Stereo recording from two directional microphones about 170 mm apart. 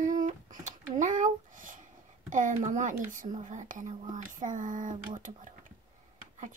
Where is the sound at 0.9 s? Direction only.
50° right (ahead or behind).